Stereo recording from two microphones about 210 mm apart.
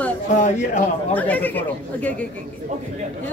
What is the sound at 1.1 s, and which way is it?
A woman's voice, 5° left (ahead or behind).